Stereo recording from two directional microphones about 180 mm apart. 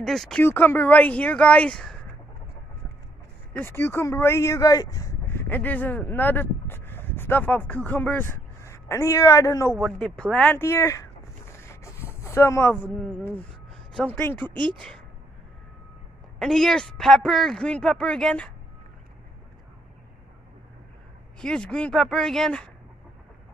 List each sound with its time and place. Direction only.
0.0 s speech: centre (ahead or behind)
3.5 s speech: 15° left (ahead or behind)
9.8 s speech: centre (ahead or behind)
11.7 s a sound: 15° left (ahead or behind)
13.9 s speech: 10° left (ahead or behind)
14.5 s speech: 25° right (ahead or behind)
16.3 s speech: 5° left (ahead or behind)
21.4 s speech: 5° left (ahead or behind)